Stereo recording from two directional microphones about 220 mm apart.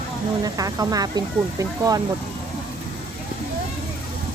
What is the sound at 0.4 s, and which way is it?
Speech, 15° right (ahead or behind).